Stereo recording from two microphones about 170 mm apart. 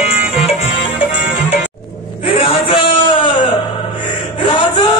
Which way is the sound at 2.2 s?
30° left (ahead or behind).